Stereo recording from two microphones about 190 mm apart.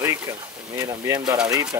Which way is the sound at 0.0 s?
15° right (ahead or behind).